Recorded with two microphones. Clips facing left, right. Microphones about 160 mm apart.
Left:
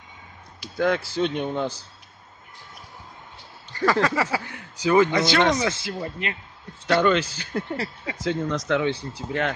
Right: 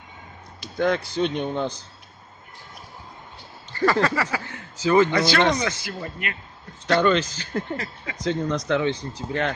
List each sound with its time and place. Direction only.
0.6 s speech: 5° left (ahead or behind)
4.1 s speech: 20° left (ahead or behind); by 5.7 s 5° left (ahead or behind)
5.7 s speech: 25° left (ahead or behind)
6.9 s speech: 10° left (ahead or behind)
7.7 s speech: 35° left (ahead or behind)
8.2 s speech: 5° left (ahead or behind)